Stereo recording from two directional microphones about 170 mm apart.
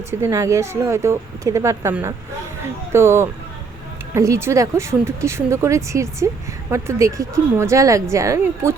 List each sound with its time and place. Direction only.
0.1 s speech: 15° right (ahead or behind)